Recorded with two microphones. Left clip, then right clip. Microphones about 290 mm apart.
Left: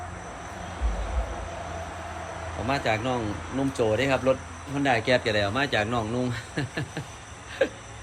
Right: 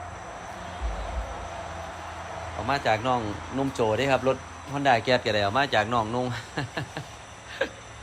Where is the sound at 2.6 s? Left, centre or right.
Centre.